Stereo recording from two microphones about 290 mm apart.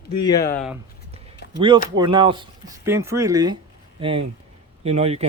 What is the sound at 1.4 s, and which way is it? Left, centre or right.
Chop, left.